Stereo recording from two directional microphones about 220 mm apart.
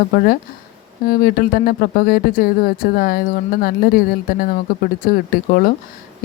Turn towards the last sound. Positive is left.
turn(degrees=40)  # may be behind; listen again after turning